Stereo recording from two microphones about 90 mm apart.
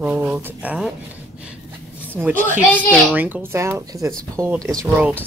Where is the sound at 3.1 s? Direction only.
20° right (ahead or behind).